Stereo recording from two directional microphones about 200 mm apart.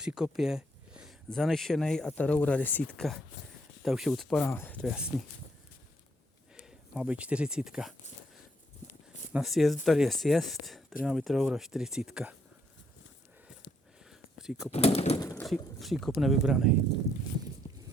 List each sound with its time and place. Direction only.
0.0 s speech: 5° right (ahead or behind)
6.7 s speech: 5° right (ahead or behind)
9.3 s speech: centre (ahead or behind)
14.1 s a sound: 5° right (ahead or behind)
14.7 s speech: 30° left (ahead or behind)
15.4 s speech: centre (ahead or behind)